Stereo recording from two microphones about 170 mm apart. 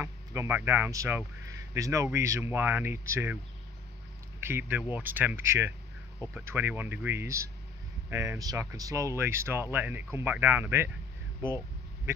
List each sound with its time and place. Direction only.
0.0 s speech: 15° right (ahead or behind)
4.4 s speech: 15° right (ahead or behind)